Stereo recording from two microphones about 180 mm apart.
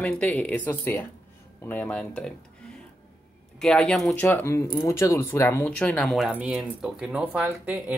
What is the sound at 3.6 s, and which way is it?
Speech, 5° left (ahead or behind).